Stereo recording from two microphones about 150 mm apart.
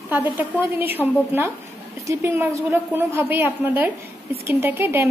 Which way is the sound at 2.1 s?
15° right (ahead or behind).